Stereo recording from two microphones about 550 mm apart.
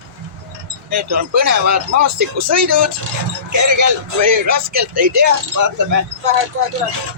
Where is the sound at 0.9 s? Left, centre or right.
Right.